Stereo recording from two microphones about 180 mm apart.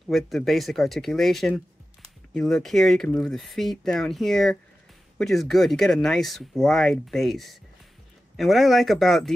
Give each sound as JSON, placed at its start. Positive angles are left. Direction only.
{"t": 0.1, "sound": "speech", "side_deg": 0}